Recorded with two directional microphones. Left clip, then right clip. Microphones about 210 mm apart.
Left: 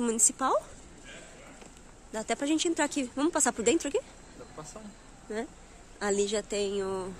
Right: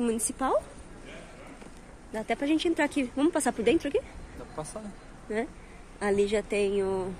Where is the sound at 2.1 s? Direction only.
15° left (ahead or behind).